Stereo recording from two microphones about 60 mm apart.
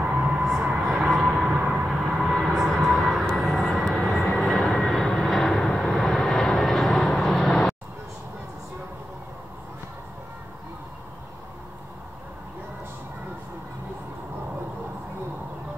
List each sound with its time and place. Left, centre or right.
0.0 s music: centre
0.7 s a sound: centre
2.3 s vehicle: centre